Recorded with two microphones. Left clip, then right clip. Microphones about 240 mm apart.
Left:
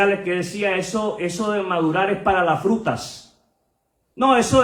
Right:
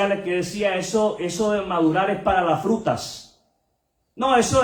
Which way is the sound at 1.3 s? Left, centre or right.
Left.